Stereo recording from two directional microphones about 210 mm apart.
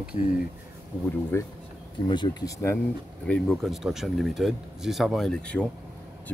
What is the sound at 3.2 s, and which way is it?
Speech, 5° left (ahead or behind).